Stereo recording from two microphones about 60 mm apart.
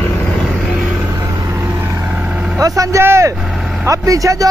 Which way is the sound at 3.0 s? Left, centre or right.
Right.